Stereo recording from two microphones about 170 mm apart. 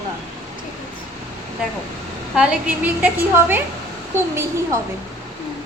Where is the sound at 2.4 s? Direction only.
10° right (ahead or behind).